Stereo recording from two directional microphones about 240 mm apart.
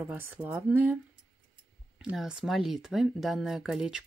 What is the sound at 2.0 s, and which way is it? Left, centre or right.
Speech, centre.